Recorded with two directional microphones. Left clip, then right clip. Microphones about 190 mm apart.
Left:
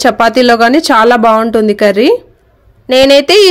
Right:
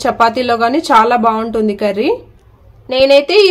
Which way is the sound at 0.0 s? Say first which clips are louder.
Left 5 dB; 45° left (ahead or behind).